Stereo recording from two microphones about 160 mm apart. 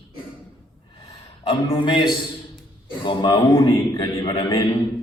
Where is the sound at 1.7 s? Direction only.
30° left (ahead or behind).